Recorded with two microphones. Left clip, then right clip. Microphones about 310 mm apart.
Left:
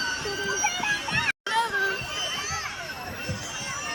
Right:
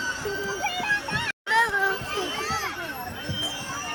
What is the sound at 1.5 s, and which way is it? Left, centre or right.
Children playing, centre.